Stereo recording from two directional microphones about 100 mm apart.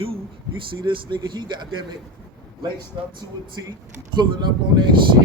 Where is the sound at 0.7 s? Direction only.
55° right (ahead or behind).